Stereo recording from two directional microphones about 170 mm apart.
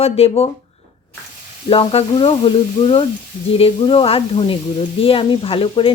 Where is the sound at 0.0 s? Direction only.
35° left (ahead or behind).